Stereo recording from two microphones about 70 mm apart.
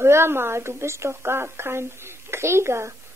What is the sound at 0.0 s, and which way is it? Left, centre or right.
Speech, right.